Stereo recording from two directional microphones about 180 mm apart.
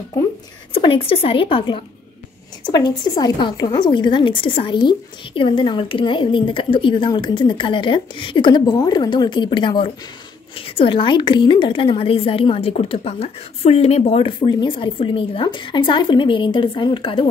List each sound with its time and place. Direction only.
0.7 s a woman's voice: 30° left (ahead or behind)